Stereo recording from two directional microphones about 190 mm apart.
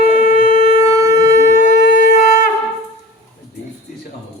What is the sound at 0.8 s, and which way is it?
Shofar, 20° right (ahead or behind).